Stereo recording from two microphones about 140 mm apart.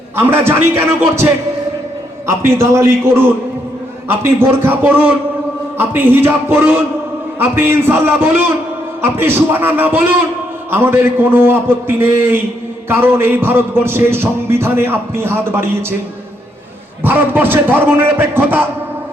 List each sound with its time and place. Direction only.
0.2 s a man's voice: 15° right (ahead or behind)
17.0 s a man's voice: 15° right (ahead or behind)